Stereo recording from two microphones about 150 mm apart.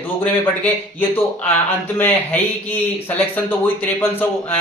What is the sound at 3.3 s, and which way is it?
Speech, 15° left (ahead or behind).